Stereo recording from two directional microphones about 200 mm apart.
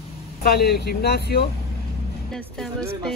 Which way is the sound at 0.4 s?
55° left (ahead or behind).